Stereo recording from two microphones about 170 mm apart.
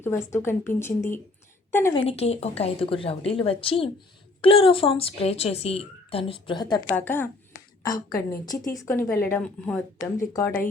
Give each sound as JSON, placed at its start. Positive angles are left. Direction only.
{"t": 0.0, "sound": "speech", "side_deg": 15}
{"t": 1.9, "sound": "a woman's voice", "side_deg": 35}
{"t": 6.8, "sound": "speech", "side_deg": 10}
{"t": 10.2, "sound": "speech", "side_deg": 15}